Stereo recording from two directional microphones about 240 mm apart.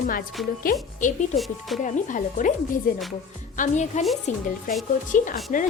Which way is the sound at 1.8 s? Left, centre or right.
Left.